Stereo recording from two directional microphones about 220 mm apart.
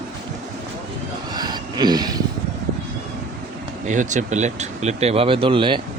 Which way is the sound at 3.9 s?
35° right (ahead or behind).